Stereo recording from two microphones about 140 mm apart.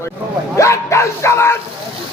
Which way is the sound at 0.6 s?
20° left (ahead or behind).